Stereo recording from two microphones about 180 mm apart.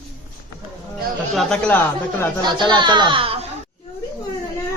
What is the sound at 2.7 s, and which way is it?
Speech, 25° right (ahead or behind).